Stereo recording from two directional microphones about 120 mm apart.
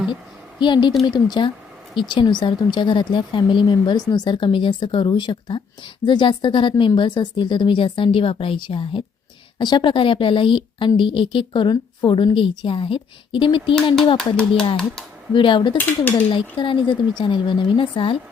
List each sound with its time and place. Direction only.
0.6 s a woman's voice: 40° left (ahead or behind)
14.2 s speech: 5° left (ahead or behind)
15.3 s a woman's voice: 45° left (ahead or behind)
15.8 s speech: 15° left (ahead or behind)
16.3 s a woman's voice: 40° left (ahead or behind)